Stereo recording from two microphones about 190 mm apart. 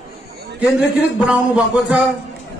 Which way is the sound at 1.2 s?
5° right (ahead or behind).